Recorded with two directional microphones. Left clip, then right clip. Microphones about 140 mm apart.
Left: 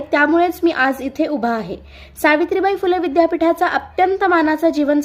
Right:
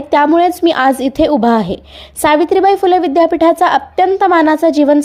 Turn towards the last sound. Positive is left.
turn(degrees=-35)  # may be behind; listen again after turning